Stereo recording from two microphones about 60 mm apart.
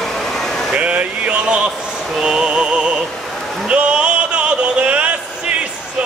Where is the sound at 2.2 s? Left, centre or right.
Centre.